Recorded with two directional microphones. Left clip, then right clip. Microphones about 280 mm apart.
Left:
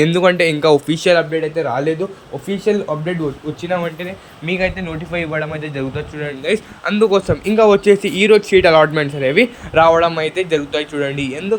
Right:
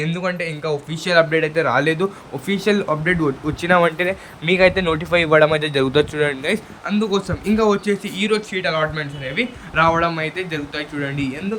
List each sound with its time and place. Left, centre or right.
0.0 s speech: left
1.3 s a man's voice: centre
3.6 s a man's voice: centre
6.8 s speech: centre